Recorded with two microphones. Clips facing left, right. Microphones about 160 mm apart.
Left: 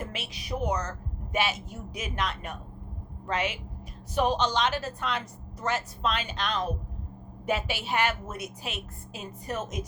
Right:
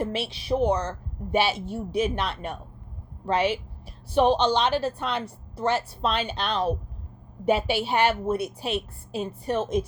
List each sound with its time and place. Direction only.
0.0 s a woman's voice: 30° right (ahead or behind)